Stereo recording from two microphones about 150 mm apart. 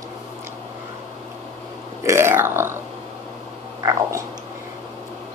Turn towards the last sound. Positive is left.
turn(degrees=-20)  # may be behind; listen again after turning